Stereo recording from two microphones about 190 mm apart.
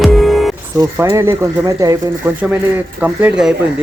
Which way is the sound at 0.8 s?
15° right (ahead or behind).